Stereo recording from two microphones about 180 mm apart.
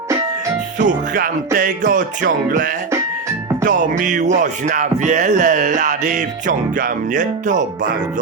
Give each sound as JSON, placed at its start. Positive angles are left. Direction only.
{"t": 0.8, "sound": "music", "side_deg": -45}